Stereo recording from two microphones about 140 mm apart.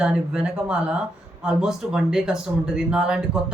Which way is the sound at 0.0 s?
5° right (ahead or behind).